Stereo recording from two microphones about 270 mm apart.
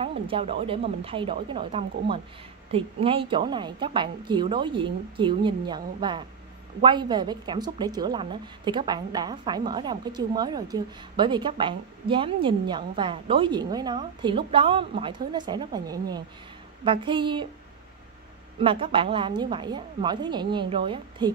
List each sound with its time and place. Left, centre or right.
0.0 s a woman's voice: right
18.6 s a woman's voice: centre